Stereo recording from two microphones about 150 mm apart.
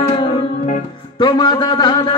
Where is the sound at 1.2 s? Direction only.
30° left (ahead or behind).